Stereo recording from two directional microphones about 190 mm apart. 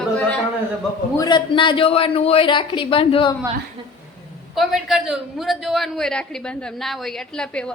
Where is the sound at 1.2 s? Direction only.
25° left (ahead or behind).